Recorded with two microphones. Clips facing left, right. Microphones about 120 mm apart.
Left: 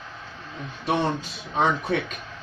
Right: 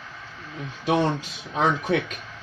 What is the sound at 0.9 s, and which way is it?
Speech, 90° right.